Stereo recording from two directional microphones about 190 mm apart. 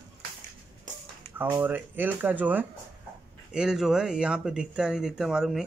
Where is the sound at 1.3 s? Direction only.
10° right (ahead or behind).